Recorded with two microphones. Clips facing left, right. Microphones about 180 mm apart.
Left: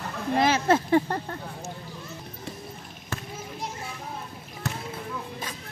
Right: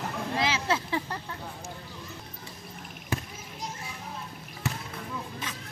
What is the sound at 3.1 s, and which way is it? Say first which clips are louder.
Basketball bounce: right 3 dB; 15° right (ahead or behind).